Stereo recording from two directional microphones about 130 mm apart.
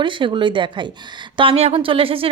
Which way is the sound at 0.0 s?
40° right (ahead or behind).